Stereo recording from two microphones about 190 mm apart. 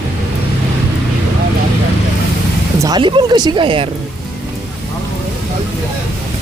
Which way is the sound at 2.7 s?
20° right (ahead or behind).